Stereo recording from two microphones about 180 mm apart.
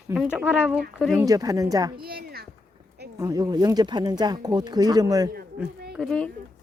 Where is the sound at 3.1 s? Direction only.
20° right (ahead or behind).